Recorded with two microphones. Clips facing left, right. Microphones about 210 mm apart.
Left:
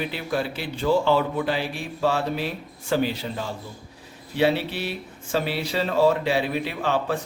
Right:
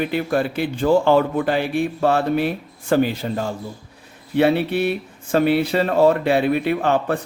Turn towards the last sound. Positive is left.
turn(degrees=-55)  # may be behind; listen again after turning